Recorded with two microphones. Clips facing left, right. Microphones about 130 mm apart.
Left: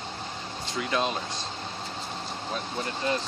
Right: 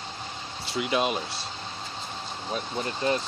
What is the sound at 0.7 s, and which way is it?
Speech, 15° right (ahead or behind).